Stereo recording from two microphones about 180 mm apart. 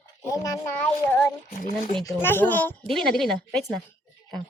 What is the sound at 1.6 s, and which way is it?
Speech, 45° left (ahead or behind).